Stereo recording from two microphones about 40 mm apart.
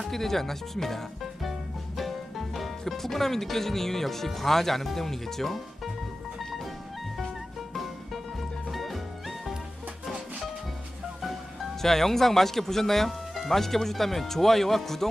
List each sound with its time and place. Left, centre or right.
0.1 s speech: centre
2.0 s music: centre
2.6 s speech: centre
6.4 s music: centre
7.8 s music: centre
11.8 s speech: centre